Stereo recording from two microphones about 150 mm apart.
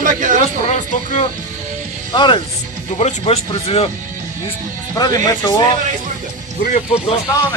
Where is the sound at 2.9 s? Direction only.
45° left (ahead or behind).